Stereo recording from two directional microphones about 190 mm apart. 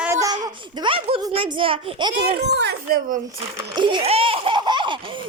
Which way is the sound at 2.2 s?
60° right (ahead or behind).